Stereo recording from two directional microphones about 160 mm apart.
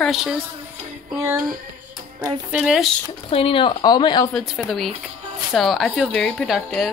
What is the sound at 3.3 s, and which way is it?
Speech, 35° left (ahead or behind).